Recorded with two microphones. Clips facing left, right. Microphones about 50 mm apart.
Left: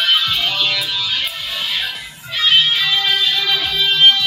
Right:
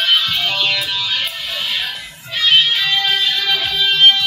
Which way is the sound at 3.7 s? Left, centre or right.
Right.